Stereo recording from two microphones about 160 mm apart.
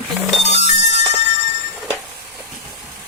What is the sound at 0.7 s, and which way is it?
Music, 45° left (ahead or behind).